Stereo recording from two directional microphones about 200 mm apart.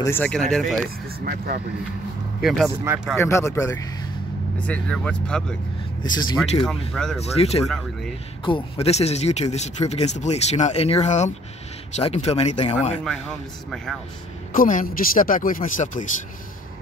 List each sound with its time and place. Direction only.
0.0 s speech: 10° left (ahead or behind)
0.8 s speech: 50° right (ahead or behind)
2.4 s speech: centre (ahead or behind)
3.2 s speech: 15° left (ahead or behind)
6.0 s speech: 20° left (ahead or behind)
6.9 s speech: centre (ahead or behind)
7.2 s speech: 30° left (ahead or behind)
7.6 s speech: centre (ahead or behind)
8.5 s speech: 25° left (ahead or behind)
13.0 s speech: 5° left (ahead or behind)
14.5 s speech: 40° left (ahead or behind)